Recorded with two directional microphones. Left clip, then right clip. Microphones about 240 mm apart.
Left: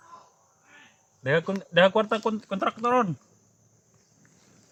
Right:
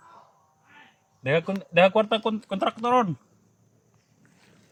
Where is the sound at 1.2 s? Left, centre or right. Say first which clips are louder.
Even; centre.